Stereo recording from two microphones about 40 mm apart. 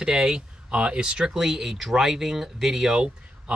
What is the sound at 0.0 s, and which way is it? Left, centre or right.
Speech, centre.